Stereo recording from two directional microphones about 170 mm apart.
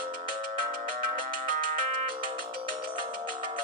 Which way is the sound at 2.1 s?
30° right (ahead or behind).